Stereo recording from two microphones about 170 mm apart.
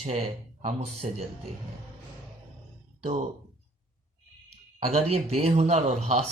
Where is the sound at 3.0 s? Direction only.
40° right (ahead or behind).